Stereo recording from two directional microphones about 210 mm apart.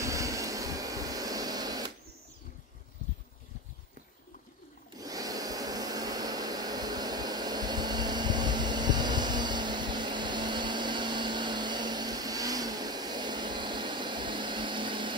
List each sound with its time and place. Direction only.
0.0 s air conditioning: 15° right (ahead or behind)
4.9 s vacuum cleaner: 15° right (ahead or behind)